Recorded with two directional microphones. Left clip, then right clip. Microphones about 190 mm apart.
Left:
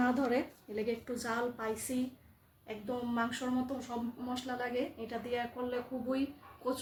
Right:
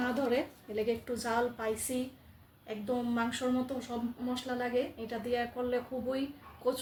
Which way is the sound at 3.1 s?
10° left (ahead or behind).